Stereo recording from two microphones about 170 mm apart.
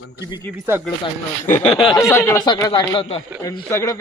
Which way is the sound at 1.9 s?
15° left (ahead or behind).